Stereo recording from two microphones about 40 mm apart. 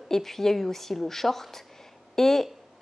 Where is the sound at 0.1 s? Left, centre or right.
Centre.